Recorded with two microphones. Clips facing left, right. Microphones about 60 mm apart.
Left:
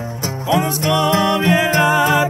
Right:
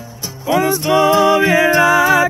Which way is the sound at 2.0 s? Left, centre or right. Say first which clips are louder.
Right 3 dB; right.